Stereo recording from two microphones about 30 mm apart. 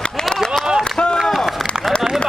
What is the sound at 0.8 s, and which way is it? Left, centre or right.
Run, left.